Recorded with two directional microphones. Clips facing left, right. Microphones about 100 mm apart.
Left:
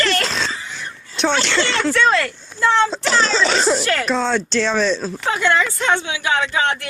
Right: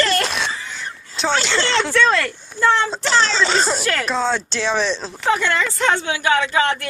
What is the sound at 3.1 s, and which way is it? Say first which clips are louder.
Speech: even; 5° left (ahead or behind).